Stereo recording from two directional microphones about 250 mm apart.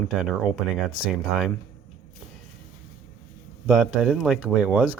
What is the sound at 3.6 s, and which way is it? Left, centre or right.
Speech, centre.